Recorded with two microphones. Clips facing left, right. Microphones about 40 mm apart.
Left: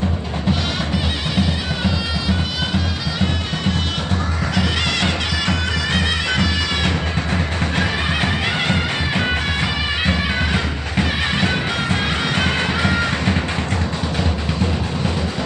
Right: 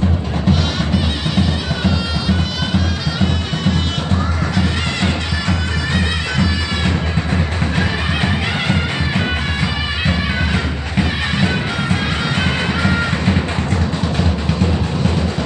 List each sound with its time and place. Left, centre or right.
0.5 s music: centre
5.5 s bagpipes: centre
6.8 s music: centre